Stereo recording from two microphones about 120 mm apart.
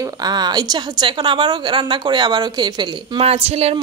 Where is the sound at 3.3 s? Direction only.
60° right (ahead or behind).